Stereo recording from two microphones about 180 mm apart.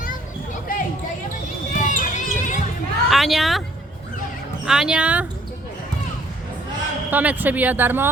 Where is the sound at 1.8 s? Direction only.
45° left (ahead or behind).